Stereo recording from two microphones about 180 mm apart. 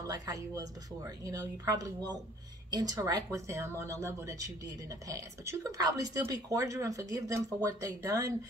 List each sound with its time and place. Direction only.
0.0 s speech: 20° right (ahead or behind)